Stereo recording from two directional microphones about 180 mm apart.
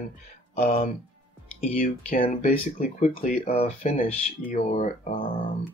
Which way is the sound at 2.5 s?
50° left (ahead or behind).